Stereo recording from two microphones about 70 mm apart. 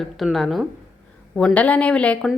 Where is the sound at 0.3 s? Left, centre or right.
Centre.